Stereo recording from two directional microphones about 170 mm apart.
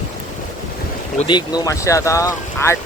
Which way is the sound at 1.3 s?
25° left (ahead or behind).